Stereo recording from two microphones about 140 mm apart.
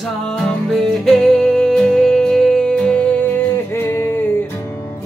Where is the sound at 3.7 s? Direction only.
15° left (ahead or behind).